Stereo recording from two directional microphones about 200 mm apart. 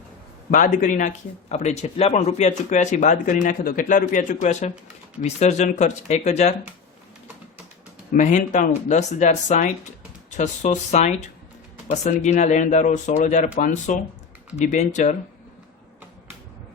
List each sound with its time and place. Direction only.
0.5 s speech: 40° left (ahead or behind)
8.1 s speech: 40° left (ahead or behind)